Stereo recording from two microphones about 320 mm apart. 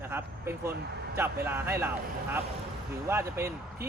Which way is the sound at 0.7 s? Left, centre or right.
Right.